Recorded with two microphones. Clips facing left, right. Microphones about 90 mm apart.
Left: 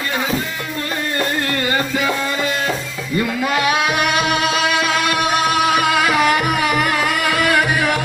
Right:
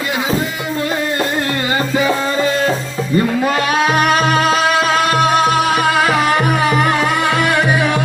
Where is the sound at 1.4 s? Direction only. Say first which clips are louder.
Right 2 dB; 25° right (ahead or behind).